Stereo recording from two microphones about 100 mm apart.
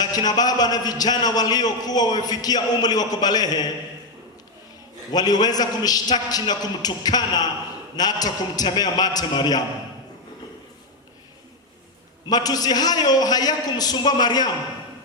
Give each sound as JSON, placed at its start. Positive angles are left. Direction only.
{"t": 0.0, "sound": "a man's voice", "side_deg": 40}
{"t": 5.1, "sound": "a man's voice", "side_deg": 40}
{"t": 12.3, "sound": "a man's voice", "side_deg": 40}